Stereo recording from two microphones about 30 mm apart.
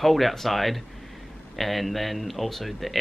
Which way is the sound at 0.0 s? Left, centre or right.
Centre.